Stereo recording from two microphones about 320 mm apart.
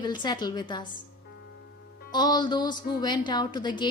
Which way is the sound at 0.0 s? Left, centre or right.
Centre.